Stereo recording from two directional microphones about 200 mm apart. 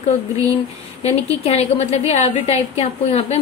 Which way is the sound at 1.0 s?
30° left (ahead or behind).